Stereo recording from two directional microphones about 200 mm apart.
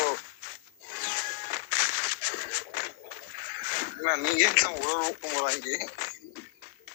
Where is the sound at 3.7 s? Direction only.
40° left (ahead or behind).